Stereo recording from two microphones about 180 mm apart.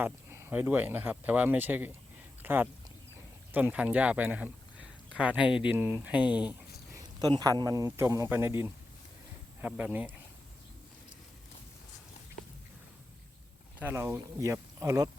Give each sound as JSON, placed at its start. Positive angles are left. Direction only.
{"t": 0.0, "sound": "speech", "side_deg": -15}
{"t": 2.4, "sound": "a sound", "side_deg": -10}
{"t": 3.5, "sound": "speech", "side_deg": -10}
{"t": 6.9, "sound": "a sound", "side_deg": -20}
{"t": 7.6, "sound": "speech", "side_deg": -20}
{"t": 13.7, "sound": "speech", "side_deg": -15}